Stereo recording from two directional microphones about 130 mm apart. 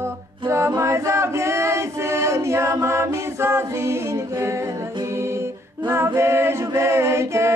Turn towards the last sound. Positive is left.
turn(degrees=-20)  # may be behind; listen again after turning